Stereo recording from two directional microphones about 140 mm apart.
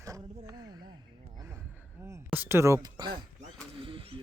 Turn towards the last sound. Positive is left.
turn(degrees=-40)  # may be behind; listen again after turning